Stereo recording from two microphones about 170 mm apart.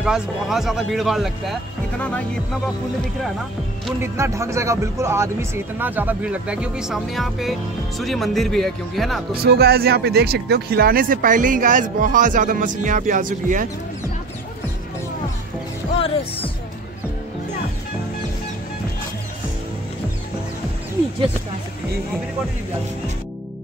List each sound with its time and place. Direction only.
0.0 s speech: centre (ahead or behind)
4.0 s speech: 15° right (ahead or behind); by 9.2 s centre (ahead or behind)
9.4 s speech: 70° right (ahead or behind); by 13.7 s 50° right (ahead or behind)